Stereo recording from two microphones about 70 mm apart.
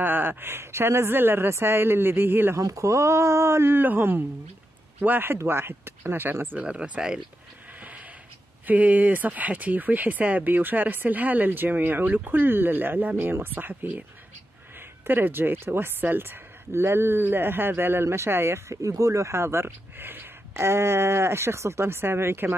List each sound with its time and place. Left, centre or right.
0.0 s speech: right
2.5 s speech: right
6.6 s speech: centre
7.8 s a sound: right
8.6 s speech: right
15.0 s speech: right